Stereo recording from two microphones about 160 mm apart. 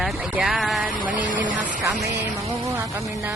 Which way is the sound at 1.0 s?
60° right (ahead or behind).